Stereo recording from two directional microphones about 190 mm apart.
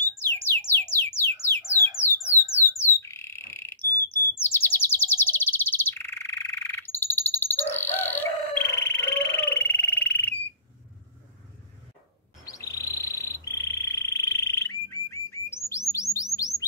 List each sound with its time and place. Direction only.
0.0 s music: 10° left (ahead or behind)
2.6 s squawk: 15° right (ahead or behind)
3.0 s frog: 15° left (ahead or behind)
12.4 s frog: 15° left (ahead or behind)
15.9 s bird: 15° left (ahead or behind)